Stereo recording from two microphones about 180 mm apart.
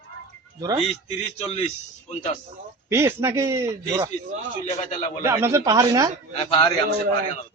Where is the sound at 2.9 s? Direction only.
15° right (ahead or behind).